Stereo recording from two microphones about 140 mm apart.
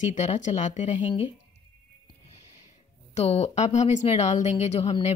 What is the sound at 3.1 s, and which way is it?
Speech, 50° left (ahead or behind).